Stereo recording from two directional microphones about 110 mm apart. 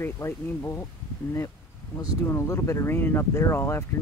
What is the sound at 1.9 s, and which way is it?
Speech, 25° left (ahead or behind).